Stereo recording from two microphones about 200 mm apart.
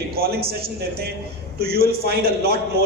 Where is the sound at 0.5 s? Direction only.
50° right (ahead or behind).